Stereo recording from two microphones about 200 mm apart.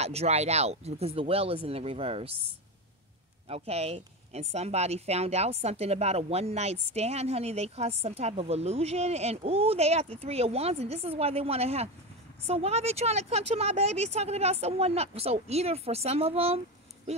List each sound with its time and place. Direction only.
0.0 s speech: 30° right (ahead or behind)
3.4 s a woman's voice: 30° right (ahead or behind)